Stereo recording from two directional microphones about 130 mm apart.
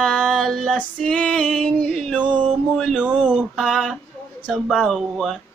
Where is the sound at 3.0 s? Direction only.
5° right (ahead or behind).